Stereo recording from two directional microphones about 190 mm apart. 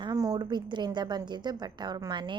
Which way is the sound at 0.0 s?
20° right (ahead or behind).